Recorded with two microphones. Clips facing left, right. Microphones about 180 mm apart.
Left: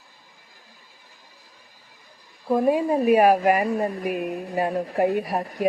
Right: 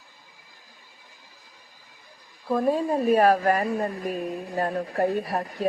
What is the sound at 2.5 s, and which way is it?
Speech, 10° left (ahead or behind).